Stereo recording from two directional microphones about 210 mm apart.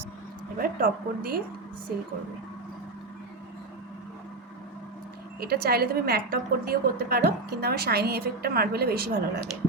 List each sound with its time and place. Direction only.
0.6 s a woman's voice: 45° right (ahead or behind)
5.4 s a woman's voice: 50° right (ahead or behind)